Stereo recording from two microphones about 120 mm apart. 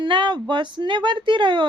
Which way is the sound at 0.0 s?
40° right (ahead or behind).